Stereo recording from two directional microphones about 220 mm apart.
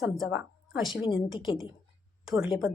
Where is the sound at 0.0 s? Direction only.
Centre (ahead or behind).